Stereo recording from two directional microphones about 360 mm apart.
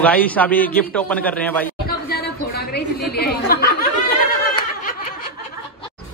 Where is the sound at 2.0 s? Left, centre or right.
Left.